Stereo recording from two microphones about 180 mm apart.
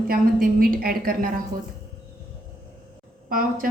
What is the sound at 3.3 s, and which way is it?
Speech, 50° right (ahead or behind).